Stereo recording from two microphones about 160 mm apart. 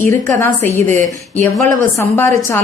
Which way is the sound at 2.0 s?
15° left (ahead or behind).